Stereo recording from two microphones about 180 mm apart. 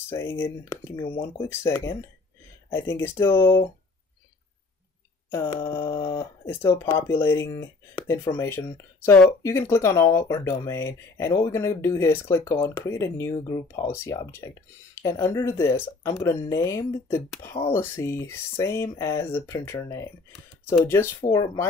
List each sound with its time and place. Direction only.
0.1 s speech: 15° left (ahead or behind)
5.3 s speech: 15° left (ahead or behind)